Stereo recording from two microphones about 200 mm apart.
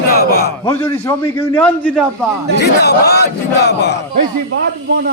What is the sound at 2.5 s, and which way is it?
Battle cry, 55° left (ahead or behind).